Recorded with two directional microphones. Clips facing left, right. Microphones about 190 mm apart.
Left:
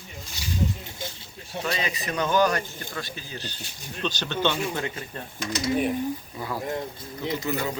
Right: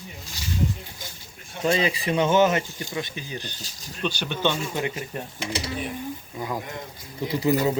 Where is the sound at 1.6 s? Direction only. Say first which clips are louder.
Right 8 dB; 30° right (ahead or behind).